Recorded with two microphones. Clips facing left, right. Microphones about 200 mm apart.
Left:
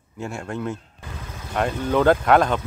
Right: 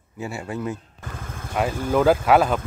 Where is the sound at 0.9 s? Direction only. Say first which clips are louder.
Right 1 dB; 50° right (ahead or behind).